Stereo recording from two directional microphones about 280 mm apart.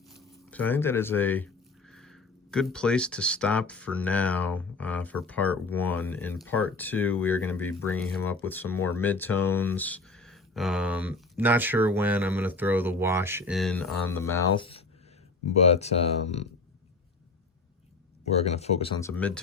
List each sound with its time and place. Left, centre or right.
0.1 s speech: centre
8.7 s speech: left
9.0 s speech: centre; by 16.5 s left
18.3 s speech: left; by 19.4 s centre